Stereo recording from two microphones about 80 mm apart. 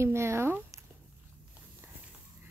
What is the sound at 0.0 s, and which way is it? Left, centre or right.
Speech, right.